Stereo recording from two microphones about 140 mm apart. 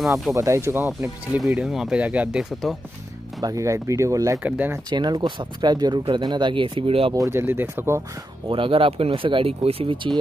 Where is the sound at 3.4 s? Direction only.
20° right (ahead or behind).